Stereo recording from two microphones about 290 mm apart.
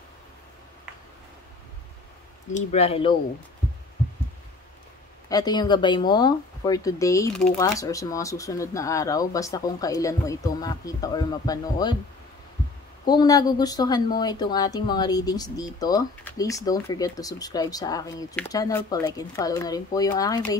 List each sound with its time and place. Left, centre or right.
2.5 s speech: left
5.3 s speech: centre
13.0 s speech: centre